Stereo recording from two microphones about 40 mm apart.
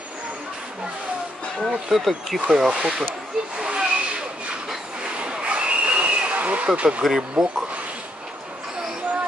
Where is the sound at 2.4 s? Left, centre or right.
Centre.